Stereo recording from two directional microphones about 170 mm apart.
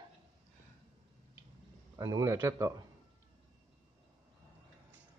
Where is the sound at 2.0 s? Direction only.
20° right (ahead or behind).